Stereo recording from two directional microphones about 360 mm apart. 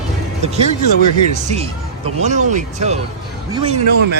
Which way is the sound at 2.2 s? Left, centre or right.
Centre.